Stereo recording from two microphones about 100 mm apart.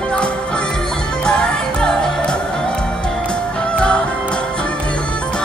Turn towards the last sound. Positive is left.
turn(degrees=10)  # may be behind; listen again after turning